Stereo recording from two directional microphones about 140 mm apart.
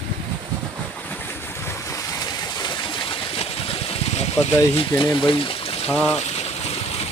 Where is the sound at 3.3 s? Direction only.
45° left (ahead or behind).